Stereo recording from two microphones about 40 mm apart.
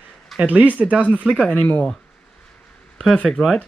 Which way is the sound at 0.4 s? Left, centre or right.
Right.